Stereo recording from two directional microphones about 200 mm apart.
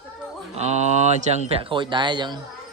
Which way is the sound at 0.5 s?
35° right (ahead or behind).